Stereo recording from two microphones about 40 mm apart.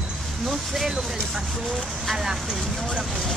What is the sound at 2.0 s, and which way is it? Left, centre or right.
Vehicle, centre.